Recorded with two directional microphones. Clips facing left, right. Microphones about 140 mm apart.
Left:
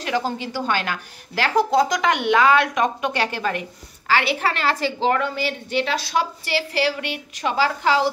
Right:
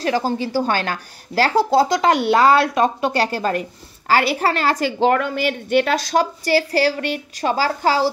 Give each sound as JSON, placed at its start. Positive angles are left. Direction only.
{"t": 0.0, "sound": "a woman's voice", "side_deg": -35}